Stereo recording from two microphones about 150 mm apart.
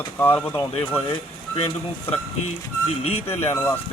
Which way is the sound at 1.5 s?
40° left (ahead or behind).